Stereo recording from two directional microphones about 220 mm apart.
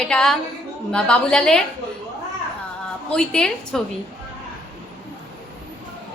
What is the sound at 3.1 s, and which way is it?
Speech, 5° left (ahead or behind).